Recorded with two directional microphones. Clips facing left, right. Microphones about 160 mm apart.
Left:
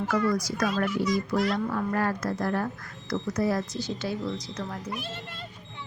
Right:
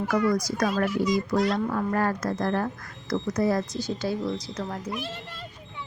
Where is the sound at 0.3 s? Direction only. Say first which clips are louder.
Right 2 dB; 40° right (ahead or behind).